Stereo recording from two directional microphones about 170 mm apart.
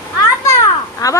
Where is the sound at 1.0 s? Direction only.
20° left (ahead or behind).